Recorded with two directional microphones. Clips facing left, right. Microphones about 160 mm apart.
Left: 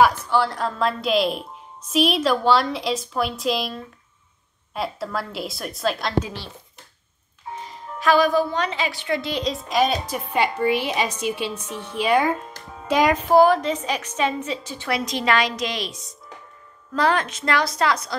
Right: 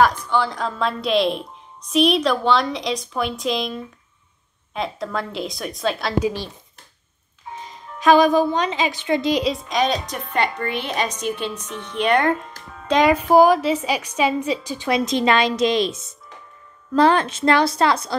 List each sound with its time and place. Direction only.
0.0 s a woman's voice: 5° left (ahead or behind); by 6.5 s 15° right (ahead or behind)
7.6 s a woman's voice: 20° right (ahead or behind)
9.4 s a woman's voice: centre (ahead or behind)
12.8 s music: 5° left (ahead or behind)
13.3 s a woman's voice: 10° right (ahead or behind); by 18.1 s 30° right (ahead or behind)